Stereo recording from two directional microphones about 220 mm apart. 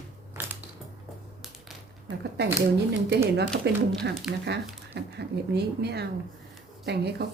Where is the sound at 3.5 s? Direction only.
50° right (ahead or behind).